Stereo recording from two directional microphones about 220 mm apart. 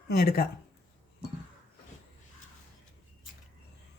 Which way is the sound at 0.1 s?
45° left (ahead or behind).